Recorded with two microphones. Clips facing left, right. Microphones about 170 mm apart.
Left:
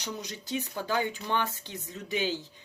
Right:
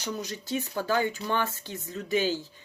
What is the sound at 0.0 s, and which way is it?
Speech, 15° left (ahead or behind).